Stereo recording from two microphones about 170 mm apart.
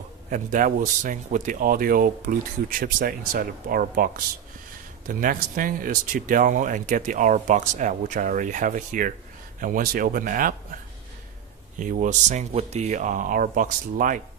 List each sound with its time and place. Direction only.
0.3 s speech: 50° right (ahead or behind)
11.8 s speech: 50° right (ahead or behind)